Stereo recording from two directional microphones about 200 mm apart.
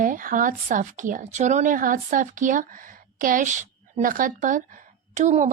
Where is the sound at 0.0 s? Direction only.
45° right (ahead or behind).